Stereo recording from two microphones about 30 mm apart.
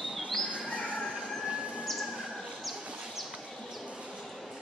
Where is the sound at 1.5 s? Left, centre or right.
Right.